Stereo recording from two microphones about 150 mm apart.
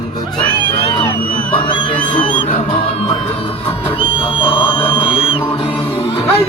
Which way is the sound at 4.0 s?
35° left (ahead or behind).